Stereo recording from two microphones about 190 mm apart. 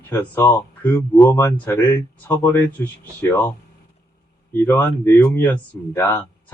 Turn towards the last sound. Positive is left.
turn(degrees=15)  # may be behind; listen again after turning